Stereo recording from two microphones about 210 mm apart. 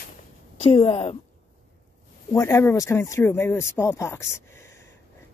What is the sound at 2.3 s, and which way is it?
Speech, 15° left (ahead or behind).